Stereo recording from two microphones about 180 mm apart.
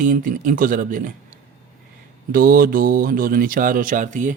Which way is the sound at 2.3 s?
55° right (ahead or behind).